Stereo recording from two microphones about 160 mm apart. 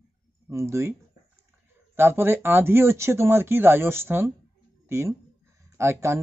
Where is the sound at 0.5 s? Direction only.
15° right (ahead or behind).